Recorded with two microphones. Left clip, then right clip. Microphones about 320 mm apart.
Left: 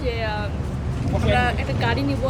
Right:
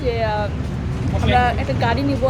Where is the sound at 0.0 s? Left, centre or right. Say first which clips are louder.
Right 5 dB; centre.